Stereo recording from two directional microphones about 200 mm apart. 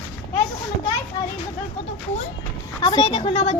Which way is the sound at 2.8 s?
20° left (ahead or behind).